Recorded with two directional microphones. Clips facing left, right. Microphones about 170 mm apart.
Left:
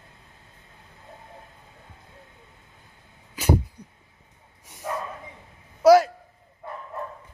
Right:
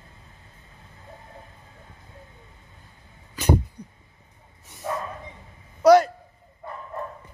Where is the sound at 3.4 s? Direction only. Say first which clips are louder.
Right 1 dB; 10° left (ahead or behind).